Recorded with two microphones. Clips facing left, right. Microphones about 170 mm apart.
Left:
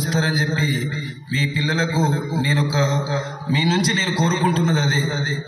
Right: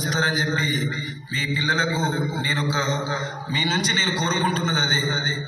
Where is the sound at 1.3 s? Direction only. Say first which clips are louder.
Left 4 dB; 30° left (ahead or behind).